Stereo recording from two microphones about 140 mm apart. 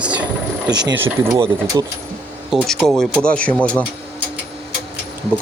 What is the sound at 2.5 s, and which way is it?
Speech, centre (ahead or behind).